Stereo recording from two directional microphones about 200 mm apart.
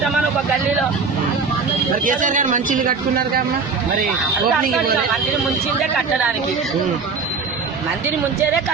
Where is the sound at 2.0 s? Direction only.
40° right (ahead or behind).